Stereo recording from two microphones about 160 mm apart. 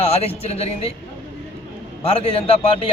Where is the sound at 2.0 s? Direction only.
35° left (ahead or behind).